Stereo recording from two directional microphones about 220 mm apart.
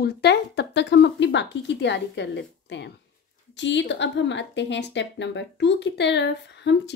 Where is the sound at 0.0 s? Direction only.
50° left (ahead or behind).